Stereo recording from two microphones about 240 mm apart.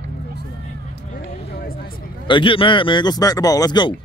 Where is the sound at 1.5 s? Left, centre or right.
Left.